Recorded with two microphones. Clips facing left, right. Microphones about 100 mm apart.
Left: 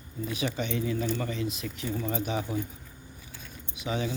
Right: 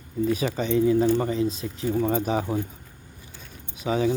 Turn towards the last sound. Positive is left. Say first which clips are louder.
# right 8 dB
turn(degrees=-35)  # may be behind; listen again after turning